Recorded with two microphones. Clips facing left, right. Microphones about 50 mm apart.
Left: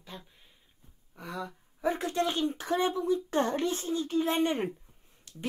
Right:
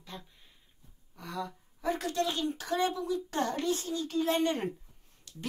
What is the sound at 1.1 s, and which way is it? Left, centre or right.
Speech, centre.